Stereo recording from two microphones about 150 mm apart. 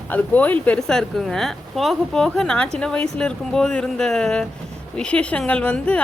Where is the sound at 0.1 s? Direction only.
10° left (ahead or behind).